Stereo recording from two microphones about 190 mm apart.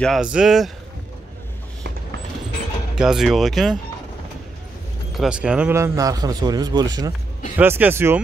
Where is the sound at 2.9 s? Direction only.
5° right (ahead or behind).